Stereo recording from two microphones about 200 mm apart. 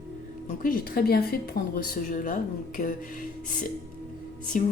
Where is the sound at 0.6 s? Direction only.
45° left (ahead or behind).